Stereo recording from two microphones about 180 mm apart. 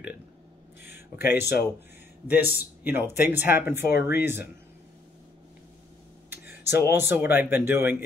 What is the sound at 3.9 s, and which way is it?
Speech, 65° left (ahead or behind).